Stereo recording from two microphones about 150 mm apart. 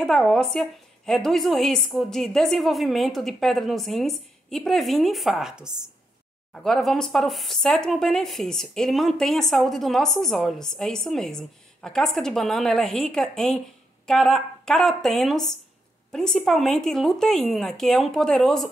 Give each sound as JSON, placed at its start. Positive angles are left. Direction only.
{"t": 0.0, "sound": "speech", "side_deg": 0}